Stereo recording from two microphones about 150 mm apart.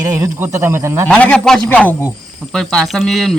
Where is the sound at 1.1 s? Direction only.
5° left (ahead or behind).